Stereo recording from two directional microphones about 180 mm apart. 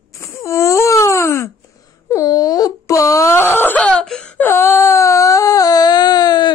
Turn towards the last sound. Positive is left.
turn(degrees=25)  # may be behind; listen again after turning